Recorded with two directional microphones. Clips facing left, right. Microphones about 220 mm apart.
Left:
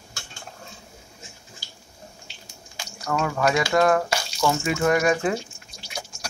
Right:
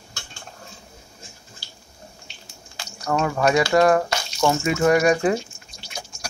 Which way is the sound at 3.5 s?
Centre (ahead or behind).